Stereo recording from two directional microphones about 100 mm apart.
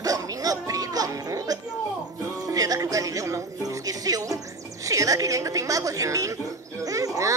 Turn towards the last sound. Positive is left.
turn(degrees=-35)  # may be behind; listen again after turning